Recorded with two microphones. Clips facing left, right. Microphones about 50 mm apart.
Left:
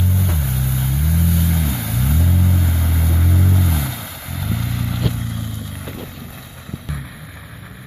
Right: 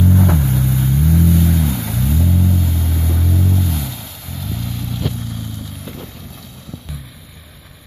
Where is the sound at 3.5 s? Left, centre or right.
Left.